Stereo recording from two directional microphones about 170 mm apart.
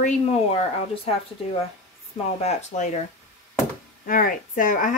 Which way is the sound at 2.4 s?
45° left (ahead or behind).